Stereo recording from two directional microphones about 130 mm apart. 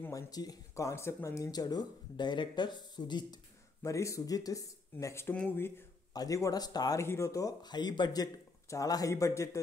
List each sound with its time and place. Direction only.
0.0 s speech: 25° left (ahead or behind)